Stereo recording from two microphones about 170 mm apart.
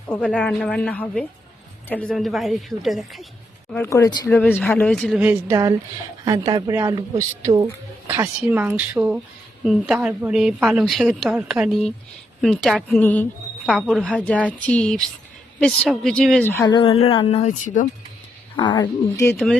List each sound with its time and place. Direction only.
0.1 s a woman's voice: 5° left (ahead or behind)
3.8 s speech: 20° left (ahead or behind)
4.3 s a woman's voice: 10° left (ahead or behind)
16.6 s speech: 30° left (ahead or behind)
18.5 s speech: 25° left (ahead or behind)